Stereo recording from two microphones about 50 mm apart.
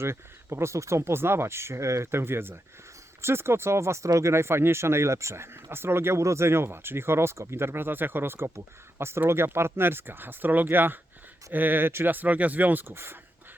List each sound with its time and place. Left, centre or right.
0.0 s speech: right
2.0 s speech: right
6.2 s speech: right
12.9 s speech: right